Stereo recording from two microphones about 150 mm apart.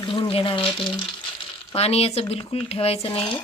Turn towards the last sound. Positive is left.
turn(degrees=35)  # may be behind; listen again after turning